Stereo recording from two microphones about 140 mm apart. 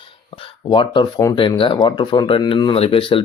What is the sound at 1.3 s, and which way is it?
Speech, 40° left (ahead or behind).